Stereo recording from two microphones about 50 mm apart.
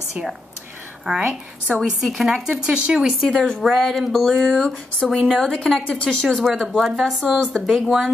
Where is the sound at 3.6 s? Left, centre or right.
Centre.